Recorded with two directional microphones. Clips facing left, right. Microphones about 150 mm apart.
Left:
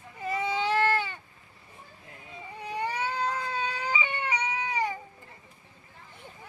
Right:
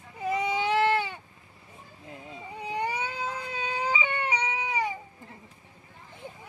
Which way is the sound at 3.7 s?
20° right (ahead or behind).